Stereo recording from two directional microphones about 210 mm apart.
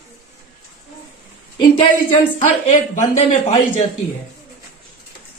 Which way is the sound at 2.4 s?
35° left (ahead or behind).